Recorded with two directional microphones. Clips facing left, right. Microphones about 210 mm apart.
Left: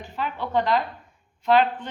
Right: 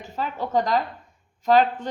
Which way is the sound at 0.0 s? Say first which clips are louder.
Right 1 dB; 40° right (ahead or behind).